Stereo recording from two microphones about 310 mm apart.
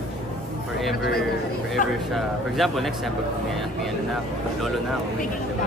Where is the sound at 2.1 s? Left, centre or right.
Centre.